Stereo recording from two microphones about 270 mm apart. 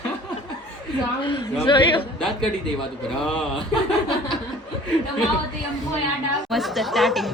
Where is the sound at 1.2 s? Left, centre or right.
Centre.